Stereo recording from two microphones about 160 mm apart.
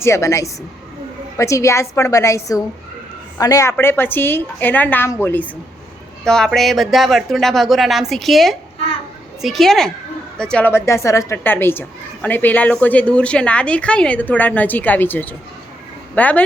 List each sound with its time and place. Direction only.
0.0 s a woman's voice: 20° left (ahead or behind)